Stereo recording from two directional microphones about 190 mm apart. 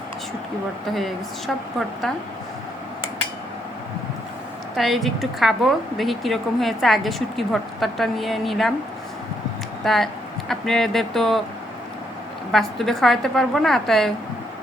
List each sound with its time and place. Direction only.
0.9 s a woman's voice: centre (ahead or behind)
4.8 s a woman's voice: centre (ahead or behind)
9.8 s a woman's voice: centre (ahead or behind)
12.5 s a woman's voice: centre (ahead or behind)